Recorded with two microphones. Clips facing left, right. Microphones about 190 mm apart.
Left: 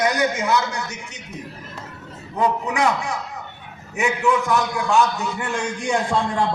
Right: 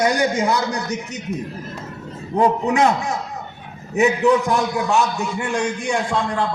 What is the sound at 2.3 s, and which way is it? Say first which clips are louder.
A man's voice: right 4 dB; 45° right (ahead or behind).